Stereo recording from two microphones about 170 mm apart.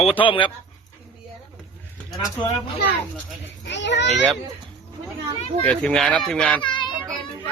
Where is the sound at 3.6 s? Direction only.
90° left.